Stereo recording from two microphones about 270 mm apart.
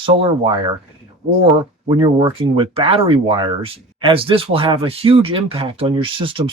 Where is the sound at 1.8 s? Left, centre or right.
Centre.